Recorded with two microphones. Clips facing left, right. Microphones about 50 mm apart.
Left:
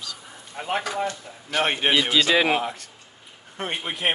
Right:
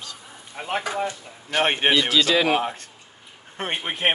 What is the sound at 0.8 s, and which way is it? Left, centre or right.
Speech, centre.